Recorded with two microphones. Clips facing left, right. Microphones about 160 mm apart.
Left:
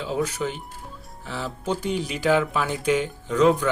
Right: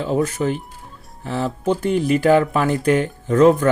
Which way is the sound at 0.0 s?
50° right (ahead or behind).